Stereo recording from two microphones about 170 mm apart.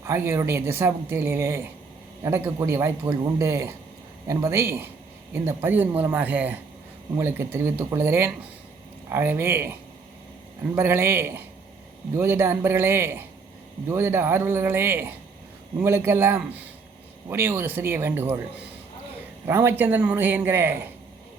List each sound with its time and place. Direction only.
0.0 s a woman's voice: 15° right (ahead or behind)
10.8 s a woman's voice: 15° right (ahead or behind)
19.5 s a woman's voice: 15° right (ahead or behind)